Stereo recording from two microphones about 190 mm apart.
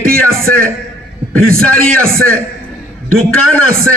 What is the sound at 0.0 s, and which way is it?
A man's voice, 50° right (ahead or behind).